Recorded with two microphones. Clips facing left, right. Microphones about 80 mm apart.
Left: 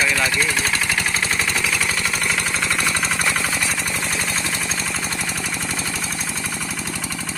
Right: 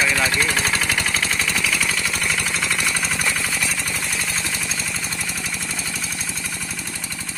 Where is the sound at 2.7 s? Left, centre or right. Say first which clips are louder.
Left 2 dB; left.